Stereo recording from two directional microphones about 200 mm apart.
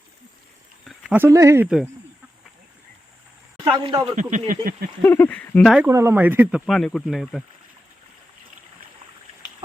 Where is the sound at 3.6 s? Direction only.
25° right (ahead or behind).